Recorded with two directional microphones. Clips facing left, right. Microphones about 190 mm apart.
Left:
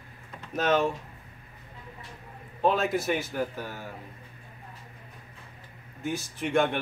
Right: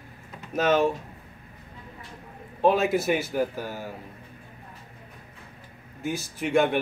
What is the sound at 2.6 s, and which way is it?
A man's voice, 5° right (ahead or behind).